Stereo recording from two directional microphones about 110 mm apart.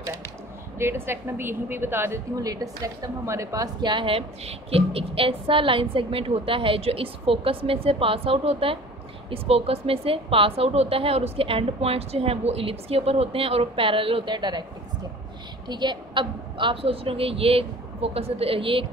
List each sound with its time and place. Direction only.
0.7 s a woman's voice: 20° right (ahead or behind)
2.3 s a woman's voice: 35° right (ahead or behind)
15.7 s a woman's voice: 45° right (ahead or behind)